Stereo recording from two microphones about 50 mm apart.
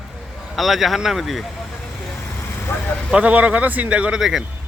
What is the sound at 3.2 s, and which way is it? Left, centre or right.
Speech, right.